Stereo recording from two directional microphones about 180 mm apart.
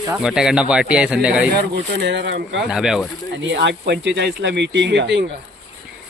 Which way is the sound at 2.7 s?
5° right (ahead or behind).